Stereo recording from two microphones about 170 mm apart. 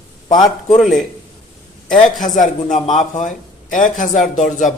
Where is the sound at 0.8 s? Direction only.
Centre (ahead or behind).